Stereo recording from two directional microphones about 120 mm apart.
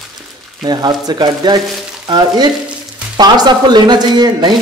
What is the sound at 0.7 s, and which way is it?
Speech, 35° right (ahead or behind).